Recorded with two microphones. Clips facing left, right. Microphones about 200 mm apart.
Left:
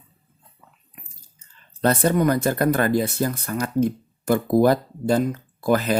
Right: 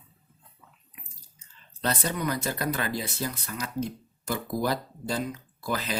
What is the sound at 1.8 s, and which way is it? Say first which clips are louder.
Speech: left 10 dB; 50° left (ahead or behind).